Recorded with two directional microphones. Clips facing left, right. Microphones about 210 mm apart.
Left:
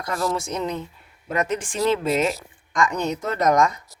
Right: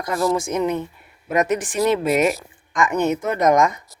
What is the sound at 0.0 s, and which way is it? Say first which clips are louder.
Speech: right 5 dB; 15° right (ahead or behind).